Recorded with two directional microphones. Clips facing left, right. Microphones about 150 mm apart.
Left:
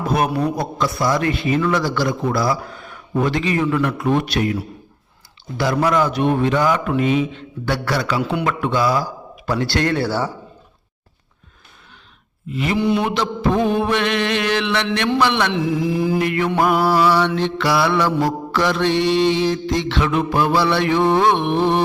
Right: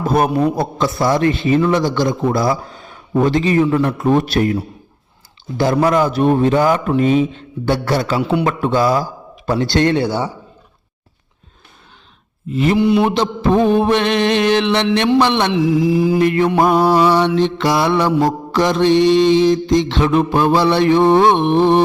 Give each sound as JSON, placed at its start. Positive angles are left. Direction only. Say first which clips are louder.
{"t": 0.0, "sound": "a sound", "louder": "right 4 dB", "side_deg": -50}
{"t": 0.3, "sound": "a man's voice", "louder": "right 4 dB", "side_deg": -30}
{"t": 5.5, "sound": "a man's voice", "louder": "right 3 dB", "side_deg": -30}
{"t": 13.1, "sound": "a man's voice", "louder": "right 4 dB", "side_deg": -30}
{"t": 16.5, "sound": "a man's voice", "louder": "right 4 dB", "side_deg": -20}